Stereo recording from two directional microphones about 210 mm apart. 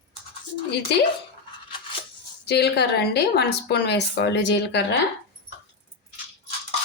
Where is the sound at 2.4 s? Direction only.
50° left (ahead or behind).